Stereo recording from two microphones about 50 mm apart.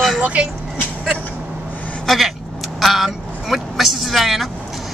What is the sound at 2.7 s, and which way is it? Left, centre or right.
Speech, centre.